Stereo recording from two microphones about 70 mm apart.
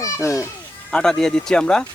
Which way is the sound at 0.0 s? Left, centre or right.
Left.